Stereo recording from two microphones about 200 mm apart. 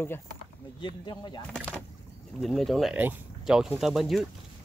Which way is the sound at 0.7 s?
25° left (ahead or behind).